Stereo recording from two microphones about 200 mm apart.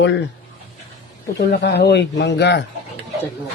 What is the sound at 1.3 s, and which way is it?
Speech, 55° left (ahead or behind).